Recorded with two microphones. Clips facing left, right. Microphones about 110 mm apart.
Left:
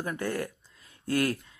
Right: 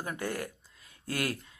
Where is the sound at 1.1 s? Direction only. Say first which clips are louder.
Left 6 dB; 40° left (ahead or behind).